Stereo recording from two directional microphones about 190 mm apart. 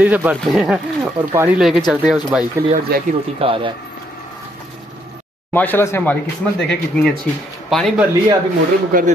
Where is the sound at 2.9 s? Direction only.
55° right (ahead or behind).